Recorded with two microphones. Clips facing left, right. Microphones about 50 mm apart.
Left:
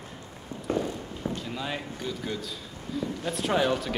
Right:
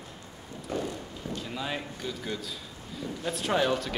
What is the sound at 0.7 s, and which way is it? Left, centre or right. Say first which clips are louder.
Walk: left 4 dB; left.